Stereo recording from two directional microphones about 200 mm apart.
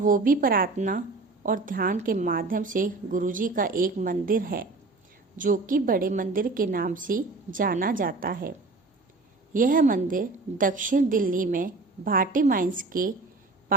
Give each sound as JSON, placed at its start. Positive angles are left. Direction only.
{"t": 0.0, "sound": "a woman's voice", "side_deg": -45}